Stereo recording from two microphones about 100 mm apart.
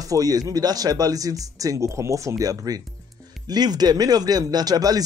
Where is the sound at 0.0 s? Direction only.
35° right (ahead or behind).